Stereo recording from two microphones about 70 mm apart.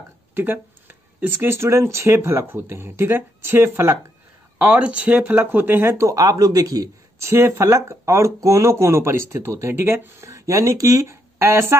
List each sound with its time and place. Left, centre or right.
0.3 s speech: right
4.6 s speech: centre; by 6.9 s right
7.2 s speech: right